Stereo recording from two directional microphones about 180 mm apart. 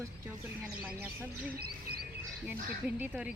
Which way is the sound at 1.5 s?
60° right (ahead or behind).